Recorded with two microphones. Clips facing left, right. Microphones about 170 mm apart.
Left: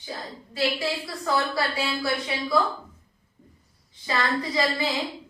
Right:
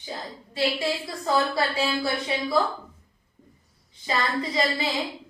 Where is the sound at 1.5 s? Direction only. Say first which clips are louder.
Right 2 dB; 25° right (ahead or behind).